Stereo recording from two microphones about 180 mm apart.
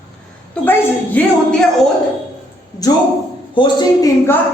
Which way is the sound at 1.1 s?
5° left (ahead or behind).